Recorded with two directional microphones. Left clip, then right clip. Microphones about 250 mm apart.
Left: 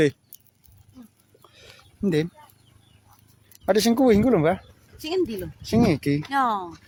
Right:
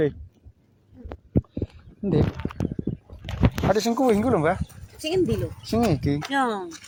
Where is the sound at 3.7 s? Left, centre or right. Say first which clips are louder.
Left 4 dB; left.